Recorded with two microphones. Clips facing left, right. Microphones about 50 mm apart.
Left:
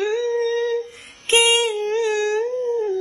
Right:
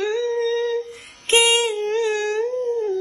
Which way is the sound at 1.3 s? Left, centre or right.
Left.